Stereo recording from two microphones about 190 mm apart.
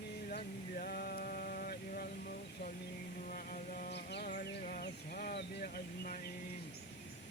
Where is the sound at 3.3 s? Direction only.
50° left (ahead or behind).